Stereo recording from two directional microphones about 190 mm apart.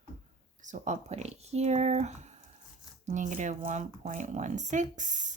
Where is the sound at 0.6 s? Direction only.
40° right (ahead or behind).